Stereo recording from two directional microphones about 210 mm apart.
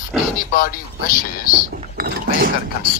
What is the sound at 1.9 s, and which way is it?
Speech, 45° right (ahead or behind).